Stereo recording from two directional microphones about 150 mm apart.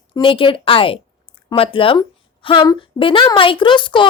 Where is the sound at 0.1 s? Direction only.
35° left (ahead or behind).